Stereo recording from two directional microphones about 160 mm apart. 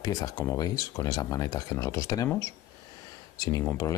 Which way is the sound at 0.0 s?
25° left (ahead or behind).